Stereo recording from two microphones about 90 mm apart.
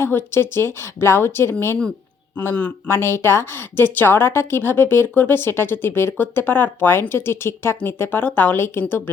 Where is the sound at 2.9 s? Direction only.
30° left (ahead or behind).